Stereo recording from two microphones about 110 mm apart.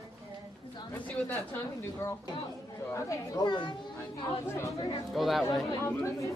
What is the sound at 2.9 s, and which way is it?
Speech, 30° left (ahead or behind).